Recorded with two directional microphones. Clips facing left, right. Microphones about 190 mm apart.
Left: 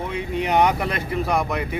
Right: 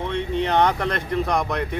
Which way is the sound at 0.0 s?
10° left (ahead or behind).